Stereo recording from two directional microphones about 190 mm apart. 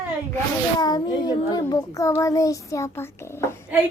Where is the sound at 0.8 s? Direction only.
20° left (ahead or behind).